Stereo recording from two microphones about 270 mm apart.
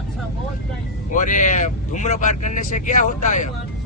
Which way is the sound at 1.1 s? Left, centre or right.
Left.